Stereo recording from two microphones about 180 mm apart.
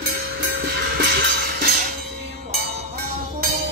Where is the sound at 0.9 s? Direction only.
60° right (ahead or behind).